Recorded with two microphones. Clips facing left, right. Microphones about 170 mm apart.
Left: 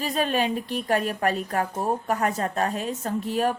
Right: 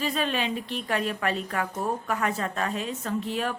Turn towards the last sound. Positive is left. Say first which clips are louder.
# left 4 dB
turn(degrees=45)  # may be behind; listen again after turning